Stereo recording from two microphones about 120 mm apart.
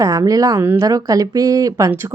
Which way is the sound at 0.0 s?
30° right (ahead or behind).